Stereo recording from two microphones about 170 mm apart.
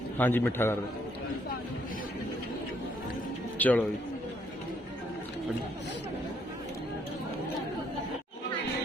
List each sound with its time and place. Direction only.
0.2 s a man's voice: 10° left (ahead or behind)
3.6 s a man's voice: 10° left (ahead or behind)